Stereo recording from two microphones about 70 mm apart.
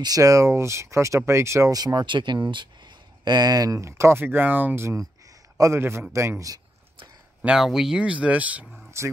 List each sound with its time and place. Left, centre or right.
0.0 s speech: right
1.7 s speech: right
3.8 s speech: right
5.6 s speech: right
7.5 s speech: centre
8.0 s speech: centre
8.6 s a sound: centre